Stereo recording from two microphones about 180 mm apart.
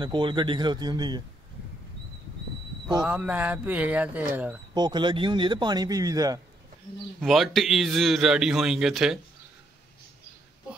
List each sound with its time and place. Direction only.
0.0 s a man's voice: 25° right (ahead or behind)
3.0 s speech: 5° right (ahead or behind)
4.7 s a man's voice: 25° right (ahead or behind)
7.2 s a man's voice: centre (ahead or behind)